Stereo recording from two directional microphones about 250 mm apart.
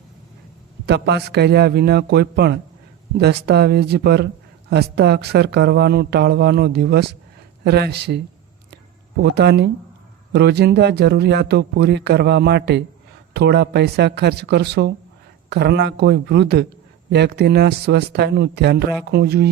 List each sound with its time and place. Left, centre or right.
0.9 s speech: right
9.3 s speech: right